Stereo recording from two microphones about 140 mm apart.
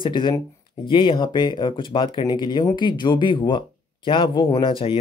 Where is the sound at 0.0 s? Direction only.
35° left (ahead or behind).